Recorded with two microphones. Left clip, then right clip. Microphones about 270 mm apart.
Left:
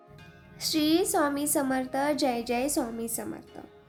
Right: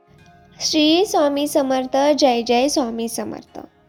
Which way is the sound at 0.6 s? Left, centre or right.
Right.